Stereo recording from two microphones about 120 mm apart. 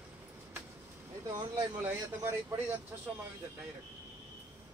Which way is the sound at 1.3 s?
35° right (ahead or behind).